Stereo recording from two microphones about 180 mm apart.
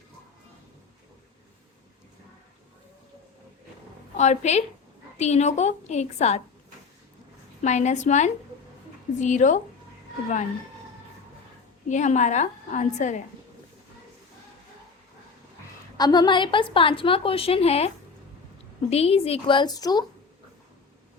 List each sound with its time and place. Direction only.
4.2 s a woman's voice: 40° left (ahead or behind)
7.6 s a woman's voice: 40° left (ahead or behind)
11.9 s a woman's voice: 40° left (ahead or behind)
16.0 s a woman's voice: 20° left (ahead or behind)